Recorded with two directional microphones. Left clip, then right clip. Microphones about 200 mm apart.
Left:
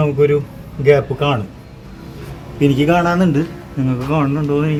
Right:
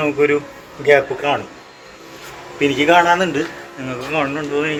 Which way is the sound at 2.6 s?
15° left (ahead or behind).